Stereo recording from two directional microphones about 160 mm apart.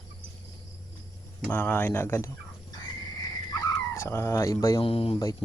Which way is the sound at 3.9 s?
15° left (ahead or behind).